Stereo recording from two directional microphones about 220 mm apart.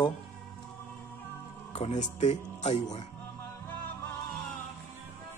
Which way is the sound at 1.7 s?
30° left (ahead or behind).